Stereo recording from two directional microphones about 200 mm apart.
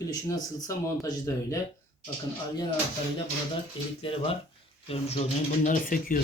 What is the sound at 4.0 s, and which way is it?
Speech, 30° left (ahead or behind).